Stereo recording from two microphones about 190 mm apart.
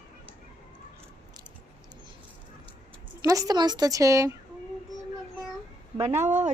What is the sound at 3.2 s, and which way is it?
A woman's voice, 20° right (ahead or behind).